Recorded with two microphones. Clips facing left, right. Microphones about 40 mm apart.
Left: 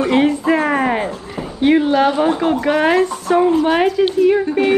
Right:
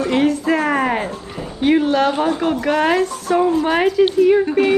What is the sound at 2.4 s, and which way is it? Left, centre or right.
Speech, centre.